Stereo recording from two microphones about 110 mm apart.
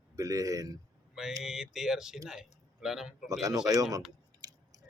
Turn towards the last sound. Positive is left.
turn(degrees=-35)  # may be behind; listen again after turning